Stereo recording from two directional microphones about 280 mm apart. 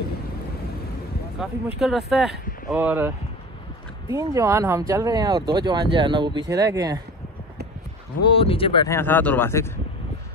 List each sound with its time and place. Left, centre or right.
1.4 s speech: centre
4.1 s speech: centre
8.3 s speech: centre